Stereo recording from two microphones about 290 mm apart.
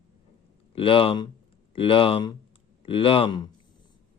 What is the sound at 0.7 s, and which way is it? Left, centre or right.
A man's voice, centre.